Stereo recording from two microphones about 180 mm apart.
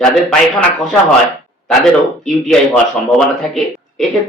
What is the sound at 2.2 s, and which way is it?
A man's voice, 5° left (ahead or behind).